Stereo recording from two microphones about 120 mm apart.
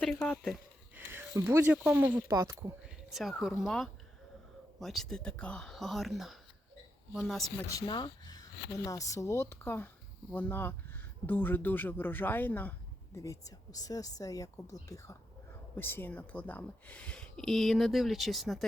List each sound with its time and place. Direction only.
0.0 s speech: 5° left (ahead or behind)
0.9 s speech: 15° right (ahead or behind)
2.8 s a sound: centre (ahead or behind)
3.6 s speech: 5° left (ahead or behind)
7.9 s speech: 40° left (ahead or behind); by 12.7 s 15° left (ahead or behind)
13.1 s speech: 30° left (ahead or behind); by 18.6 s centre (ahead or behind)